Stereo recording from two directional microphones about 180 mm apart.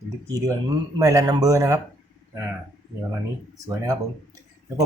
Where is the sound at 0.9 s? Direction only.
20° right (ahead or behind).